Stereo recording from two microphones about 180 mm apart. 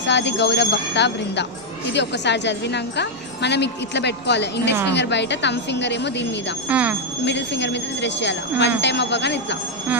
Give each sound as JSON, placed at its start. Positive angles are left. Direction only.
{"t": 0.0, "sound": "a woman's voice", "side_deg": 75}
{"t": 6.7, "sound": "speech", "side_deg": -10}
{"t": 7.3, "sound": "a woman's voice", "side_deg": 75}